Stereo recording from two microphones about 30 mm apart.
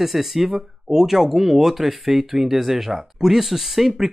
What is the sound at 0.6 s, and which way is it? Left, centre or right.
Speech, right.